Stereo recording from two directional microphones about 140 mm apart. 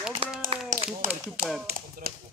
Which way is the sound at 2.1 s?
90° right.